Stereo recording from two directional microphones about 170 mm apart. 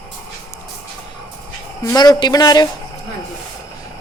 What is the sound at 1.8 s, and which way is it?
Speech, 20° left (ahead or behind).